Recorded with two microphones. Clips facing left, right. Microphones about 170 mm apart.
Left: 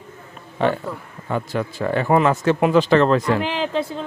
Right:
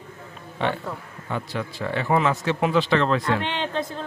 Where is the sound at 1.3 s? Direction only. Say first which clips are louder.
Left 5 dB; 45° left (ahead or behind).